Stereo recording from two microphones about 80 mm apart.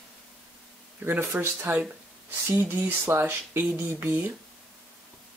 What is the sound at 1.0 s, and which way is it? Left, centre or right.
Speech, right.